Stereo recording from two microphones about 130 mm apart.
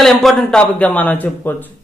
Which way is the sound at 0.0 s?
Centre (ahead or behind).